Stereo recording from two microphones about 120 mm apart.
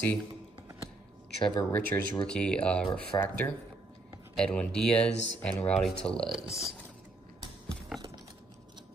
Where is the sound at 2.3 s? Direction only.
10° left (ahead or behind).